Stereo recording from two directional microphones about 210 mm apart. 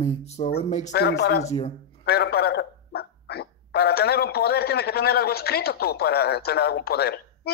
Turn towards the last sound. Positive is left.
turn(degrees=50)  # may be behind; listen again after turning